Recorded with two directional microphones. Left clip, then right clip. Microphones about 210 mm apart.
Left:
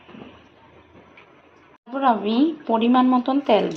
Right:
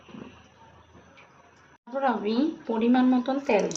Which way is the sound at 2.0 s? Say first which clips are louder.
Left 6 dB; 20° left (ahead or behind).